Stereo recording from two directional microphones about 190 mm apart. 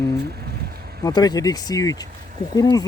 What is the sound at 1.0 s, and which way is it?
Speech, 20° left (ahead or behind).